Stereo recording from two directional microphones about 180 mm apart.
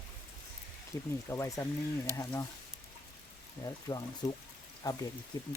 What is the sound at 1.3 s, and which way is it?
Speech, 15° left (ahead or behind).